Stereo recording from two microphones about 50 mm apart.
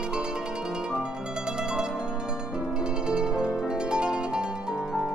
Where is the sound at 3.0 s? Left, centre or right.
Centre.